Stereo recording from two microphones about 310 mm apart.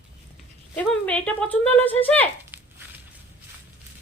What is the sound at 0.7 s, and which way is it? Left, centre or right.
A woman's voice, centre.